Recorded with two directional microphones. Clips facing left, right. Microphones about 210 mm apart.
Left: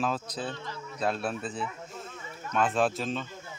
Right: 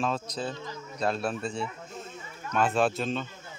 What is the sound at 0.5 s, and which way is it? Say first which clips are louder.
Speech: right 1 dB; 20° right (ahead or behind).